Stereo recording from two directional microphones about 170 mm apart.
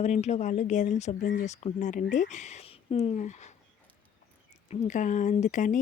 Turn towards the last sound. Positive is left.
turn(degrees=45)  # may be behind; listen again after turning